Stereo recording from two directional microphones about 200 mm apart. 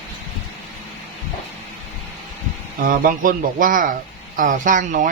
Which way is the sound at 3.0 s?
45° right (ahead or behind).